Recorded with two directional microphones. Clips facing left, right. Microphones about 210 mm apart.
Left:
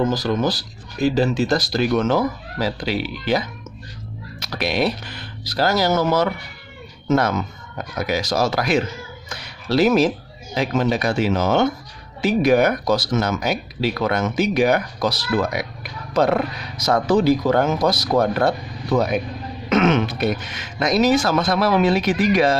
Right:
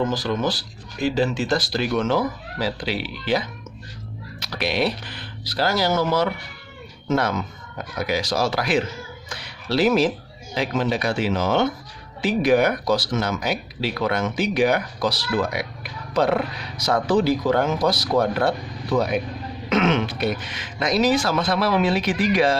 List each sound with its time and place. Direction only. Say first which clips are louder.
0.1 s speech: left 3 dB; 40° left (ahead or behind)